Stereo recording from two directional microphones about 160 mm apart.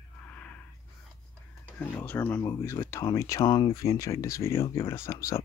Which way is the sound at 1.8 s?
10° left (ahead or behind).